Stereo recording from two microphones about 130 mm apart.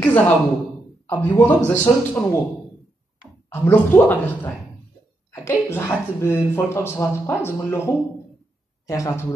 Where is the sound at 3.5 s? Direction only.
15° left (ahead or behind).